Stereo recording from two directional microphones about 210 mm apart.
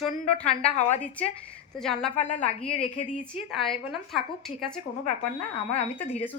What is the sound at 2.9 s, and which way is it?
Speech, 35° left (ahead or behind).